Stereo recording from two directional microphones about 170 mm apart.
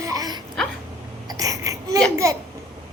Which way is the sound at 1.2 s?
20° right (ahead or behind).